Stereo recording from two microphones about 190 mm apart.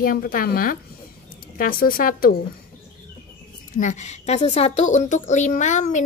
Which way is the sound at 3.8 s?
40° left (ahead or behind).